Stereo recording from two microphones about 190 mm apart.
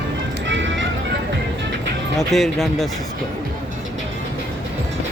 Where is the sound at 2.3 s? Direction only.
Centre (ahead or behind).